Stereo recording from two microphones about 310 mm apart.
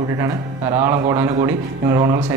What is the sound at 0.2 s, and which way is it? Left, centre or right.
A man's voice, centre.